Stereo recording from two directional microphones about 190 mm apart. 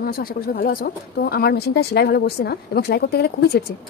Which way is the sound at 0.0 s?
50° left (ahead or behind).